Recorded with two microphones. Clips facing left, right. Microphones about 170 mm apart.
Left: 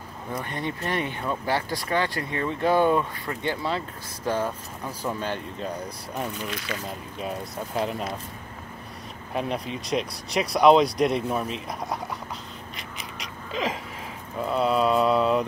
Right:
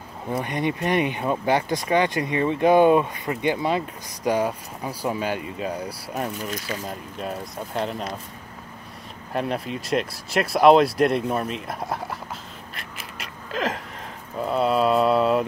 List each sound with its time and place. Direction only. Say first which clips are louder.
0.3 s speech: right 6 dB; 15° right (ahead or behind)
6.5 s speech: right 2 dB; 35° right (ahead or behind)
7.2 s speech: even; centre (ahead or behind)
9.3 s speech: right 2 dB; centre (ahead or behind)
12.7 s a sound: right 1 dB; centre (ahead or behind)
14.4 s speech: right 2 dB; centre (ahead or behind)